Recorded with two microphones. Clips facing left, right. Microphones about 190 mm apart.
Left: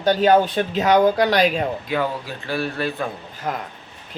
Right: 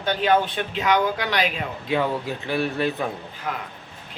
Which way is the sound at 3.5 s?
40° left (ahead or behind).